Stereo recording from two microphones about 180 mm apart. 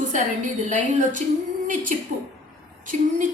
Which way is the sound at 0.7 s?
45° right (ahead or behind).